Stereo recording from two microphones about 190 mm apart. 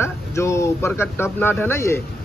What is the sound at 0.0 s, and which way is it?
Speech, 15° left (ahead or behind).